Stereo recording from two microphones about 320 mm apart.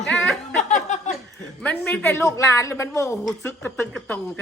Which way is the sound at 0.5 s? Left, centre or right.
Left.